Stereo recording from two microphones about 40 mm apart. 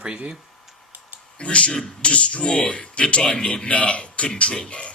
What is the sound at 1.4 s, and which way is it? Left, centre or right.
A man's voice, left.